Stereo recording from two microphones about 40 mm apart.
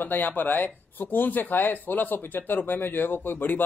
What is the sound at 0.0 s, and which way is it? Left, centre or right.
Speech, left.